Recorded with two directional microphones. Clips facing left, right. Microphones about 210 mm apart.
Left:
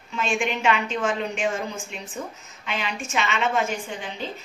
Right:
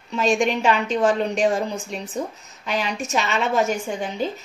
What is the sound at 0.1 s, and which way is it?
A woman's voice, 40° right (ahead or behind).